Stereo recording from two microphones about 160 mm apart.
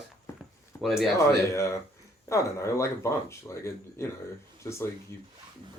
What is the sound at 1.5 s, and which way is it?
Speech, 20° left (ahead or behind).